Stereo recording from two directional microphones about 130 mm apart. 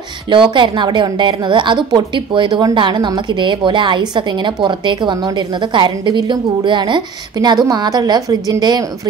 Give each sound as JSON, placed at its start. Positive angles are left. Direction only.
{"t": 0.3, "sound": "a woman's voice", "side_deg": -40}